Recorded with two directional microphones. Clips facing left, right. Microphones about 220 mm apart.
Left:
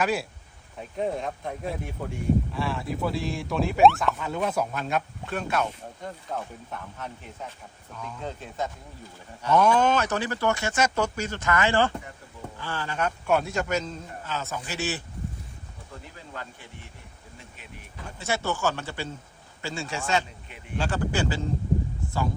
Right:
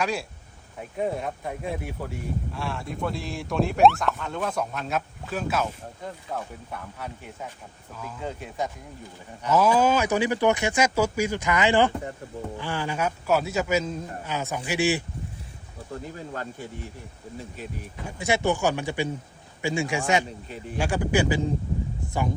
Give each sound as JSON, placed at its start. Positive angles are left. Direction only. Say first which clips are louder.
{"t": 0.0, "sound": "a man's voice", "louder": "left 2 dB", "side_deg": 0}
{"t": 16.1, "sound": "speech", "louder": "right 7 dB", "side_deg": -45}
{"t": 18.0, "sound": "a man's voice", "louder": "right 5 dB", "side_deg": -15}
{"t": 22.0, "sound": "a sound", "louder": "right 1 dB", "side_deg": -15}